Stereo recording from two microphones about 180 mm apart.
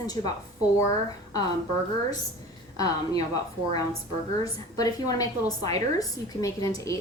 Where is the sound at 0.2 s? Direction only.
25° left (ahead or behind).